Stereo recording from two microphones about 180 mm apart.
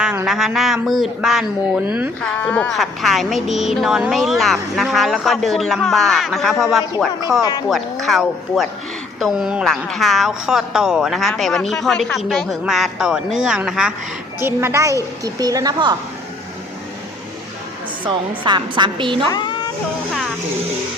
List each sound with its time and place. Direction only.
0.0 s a woman's voice: 5° right (ahead or behind)
2.2 s a woman's voice: 10° left (ahead or behind)
14.4 s a child's voice: 15° right (ahead or behind)
18.0 s a woman's voice: 25° right (ahead or behind)